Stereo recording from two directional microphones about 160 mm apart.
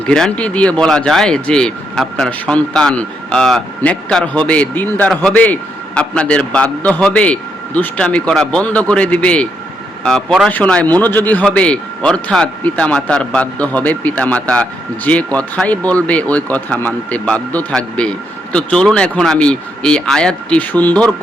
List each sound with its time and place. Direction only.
0.0 s speech: 5° left (ahead or behind)